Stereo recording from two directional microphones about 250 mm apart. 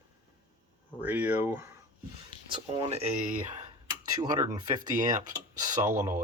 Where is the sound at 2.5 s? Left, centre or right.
Right.